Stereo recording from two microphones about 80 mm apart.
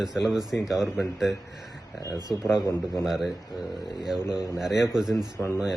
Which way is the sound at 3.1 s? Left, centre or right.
Centre.